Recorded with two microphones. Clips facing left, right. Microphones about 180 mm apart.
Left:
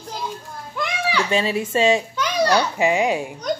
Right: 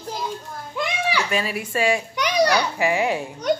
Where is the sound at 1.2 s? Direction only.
25° left (ahead or behind).